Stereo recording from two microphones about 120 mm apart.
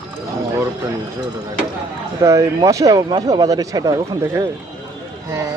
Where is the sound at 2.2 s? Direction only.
25° right (ahead or behind).